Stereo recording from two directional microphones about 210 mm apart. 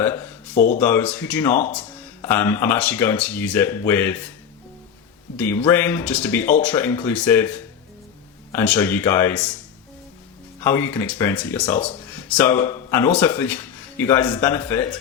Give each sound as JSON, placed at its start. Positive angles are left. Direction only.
{"t": 0.0, "sound": "a sound", "side_deg": 10}
{"t": 0.5, "sound": "speech", "side_deg": 40}
{"t": 0.8, "sound": "speech", "side_deg": 5}
{"t": 5.4, "sound": "speech", "side_deg": 10}
{"t": 10.6, "sound": "speech", "side_deg": 10}